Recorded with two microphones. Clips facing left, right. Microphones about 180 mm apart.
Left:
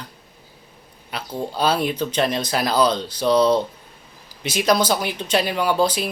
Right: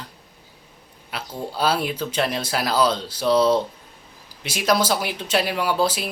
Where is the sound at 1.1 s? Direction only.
5° right (ahead or behind).